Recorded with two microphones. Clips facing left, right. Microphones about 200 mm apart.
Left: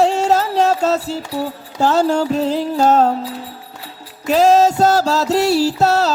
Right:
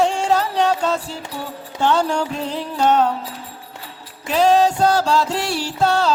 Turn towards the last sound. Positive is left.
turn(degrees=40)  # may be behind; listen again after turning